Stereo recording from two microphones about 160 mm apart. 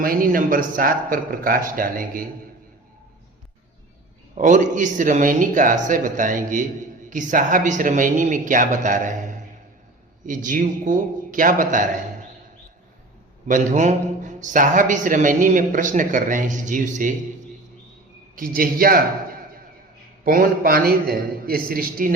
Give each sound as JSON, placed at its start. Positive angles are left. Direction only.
{"t": 0.0, "sound": "speech", "side_deg": -65}
{"t": 4.4, "sound": "a man's voice", "side_deg": -50}
{"t": 13.5, "sound": "a man's voice", "side_deg": -50}
{"t": 18.3, "sound": "speech", "side_deg": -65}